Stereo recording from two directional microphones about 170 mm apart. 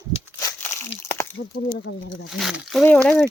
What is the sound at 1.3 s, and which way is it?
Speech, 80° left.